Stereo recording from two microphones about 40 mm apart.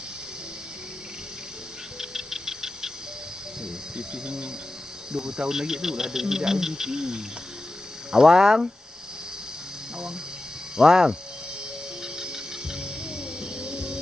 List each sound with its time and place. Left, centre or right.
2.0 s music: centre
3.6 s insect: centre
5.1 s speech: centre
10.8 s speech: centre
12.2 s music: centre